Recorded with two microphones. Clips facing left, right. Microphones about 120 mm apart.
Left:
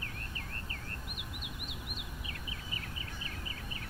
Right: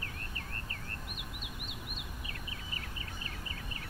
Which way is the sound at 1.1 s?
20° left (ahead or behind).